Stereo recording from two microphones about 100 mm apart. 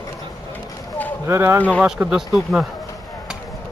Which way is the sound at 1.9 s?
10° right (ahead or behind).